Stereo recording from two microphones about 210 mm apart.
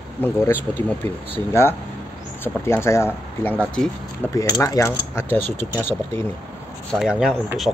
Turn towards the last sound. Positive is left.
turn(degrees=-5)  # may be behind; listen again after turning